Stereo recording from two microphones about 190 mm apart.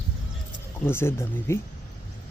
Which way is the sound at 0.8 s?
15° left (ahead or behind).